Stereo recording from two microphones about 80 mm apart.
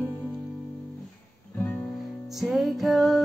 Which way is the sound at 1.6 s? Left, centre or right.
Centre.